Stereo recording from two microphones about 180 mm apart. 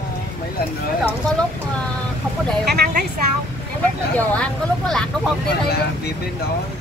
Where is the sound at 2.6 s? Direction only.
65° right (ahead or behind).